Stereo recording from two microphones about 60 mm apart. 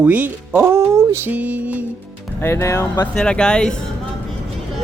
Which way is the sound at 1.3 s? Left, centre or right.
Right.